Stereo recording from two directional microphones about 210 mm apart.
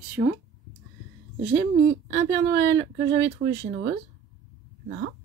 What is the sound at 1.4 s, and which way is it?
Speech, 65° right (ahead or behind).